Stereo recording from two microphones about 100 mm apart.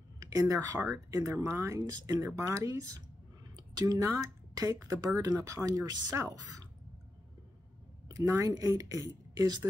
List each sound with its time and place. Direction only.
0.2 s speech: 40° right (ahead or behind)
8.1 s speech: 35° right (ahead or behind)